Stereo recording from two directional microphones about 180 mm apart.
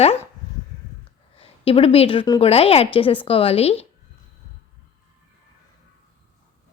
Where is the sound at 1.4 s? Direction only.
30° left (ahead or behind).